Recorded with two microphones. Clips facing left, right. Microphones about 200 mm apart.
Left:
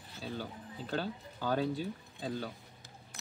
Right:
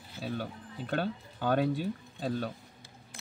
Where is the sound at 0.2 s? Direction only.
60° right (ahead or behind).